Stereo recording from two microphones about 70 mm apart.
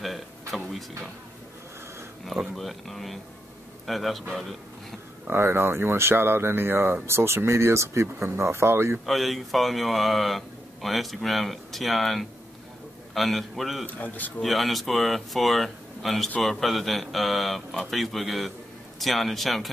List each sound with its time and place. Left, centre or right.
0.0 s a sound: centre
2.2 s speech: centre
5.3 s speech: right
9.0 s speech: centre
13.8 s speech: left
14.4 s speech: centre